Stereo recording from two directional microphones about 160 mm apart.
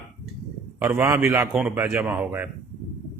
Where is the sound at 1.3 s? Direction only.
5° right (ahead or behind).